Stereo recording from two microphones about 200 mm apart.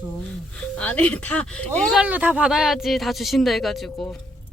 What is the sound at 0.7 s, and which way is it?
Speech, 5° left (ahead or behind).